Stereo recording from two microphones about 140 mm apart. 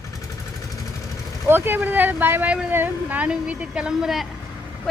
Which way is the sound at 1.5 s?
15° right (ahead or behind).